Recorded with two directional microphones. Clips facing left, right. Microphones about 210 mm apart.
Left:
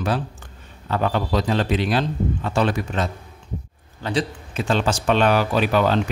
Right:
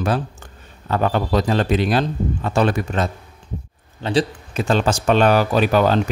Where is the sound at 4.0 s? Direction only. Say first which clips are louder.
Right 4 dB; 30° right (ahead or behind).